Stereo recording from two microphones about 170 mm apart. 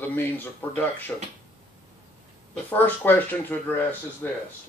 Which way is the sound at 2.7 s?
10° left (ahead or behind).